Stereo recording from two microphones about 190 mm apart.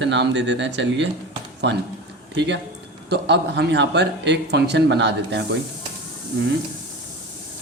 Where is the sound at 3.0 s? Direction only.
60° right (ahead or behind).